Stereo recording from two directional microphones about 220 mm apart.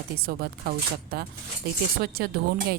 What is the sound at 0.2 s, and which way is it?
A woman's voice, 45° right (ahead or behind).